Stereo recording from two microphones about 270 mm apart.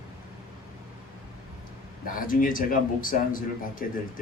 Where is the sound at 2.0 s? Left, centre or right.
Left.